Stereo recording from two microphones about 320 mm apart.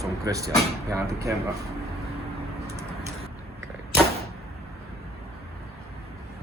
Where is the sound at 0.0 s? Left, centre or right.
Centre.